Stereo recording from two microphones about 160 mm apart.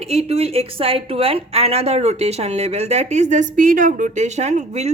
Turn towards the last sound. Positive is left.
turn(degrees=-45)  # may be behind; listen again after turning